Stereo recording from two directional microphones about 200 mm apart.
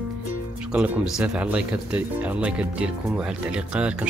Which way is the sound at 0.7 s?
5° right (ahead or behind).